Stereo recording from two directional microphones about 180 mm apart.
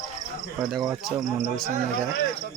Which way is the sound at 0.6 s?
Centre (ahead or behind).